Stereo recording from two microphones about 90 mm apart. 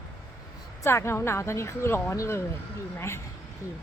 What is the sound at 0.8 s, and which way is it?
Speech, 30° left (ahead or behind).